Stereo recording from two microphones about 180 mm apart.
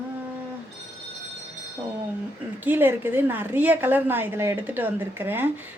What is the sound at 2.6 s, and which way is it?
A woman's voice, 10° right (ahead or behind).